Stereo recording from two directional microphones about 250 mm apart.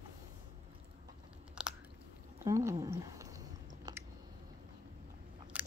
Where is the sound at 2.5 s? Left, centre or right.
Centre.